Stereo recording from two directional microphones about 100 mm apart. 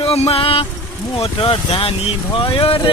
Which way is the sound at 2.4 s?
65° left (ahead or behind).